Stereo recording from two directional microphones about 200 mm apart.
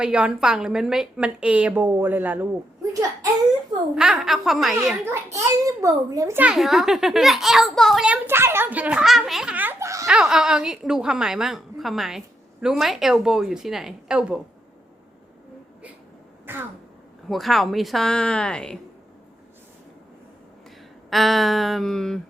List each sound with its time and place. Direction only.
0.0 s a child's voice: 5° right (ahead or behind)
2.9 s whimper: 15° right (ahead or behind)
3.9 s a child's voice: 5° right (ahead or behind)
5.0 s a child's voice: 15° right (ahead or behind)
10.1 s a child's voice: 5° right (ahead or behind)
16.5 s throat clearing: 10° right (ahead or behind)
17.2 s a child's voice: centre (ahead or behind)
21.1 s a child's voice: centre (ahead or behind)